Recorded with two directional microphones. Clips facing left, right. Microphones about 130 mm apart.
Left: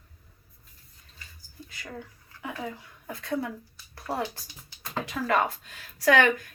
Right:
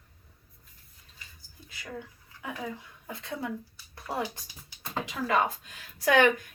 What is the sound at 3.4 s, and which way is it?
Speech, 20° right (ahead or behind).